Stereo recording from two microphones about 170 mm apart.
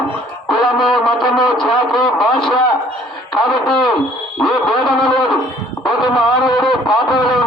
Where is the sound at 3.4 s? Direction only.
5° left (ahead or behind).